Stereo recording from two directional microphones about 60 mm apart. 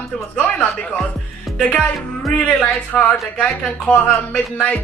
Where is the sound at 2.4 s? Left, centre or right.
Centre.